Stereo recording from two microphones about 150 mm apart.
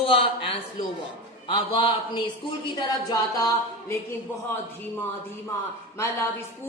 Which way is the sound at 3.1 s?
25° left (ahead or behind).